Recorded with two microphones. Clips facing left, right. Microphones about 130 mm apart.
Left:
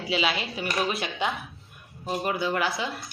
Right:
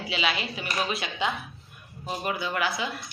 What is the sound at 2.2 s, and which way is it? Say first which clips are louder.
Speech: left 2 dB; 30° left (ahead or behind).